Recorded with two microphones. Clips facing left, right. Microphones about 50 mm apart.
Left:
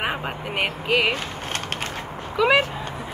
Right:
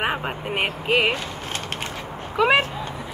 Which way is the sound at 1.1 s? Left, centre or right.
Left.